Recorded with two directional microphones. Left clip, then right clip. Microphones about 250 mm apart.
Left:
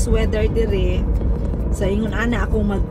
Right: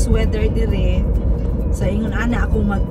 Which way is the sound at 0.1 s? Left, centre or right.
Centre.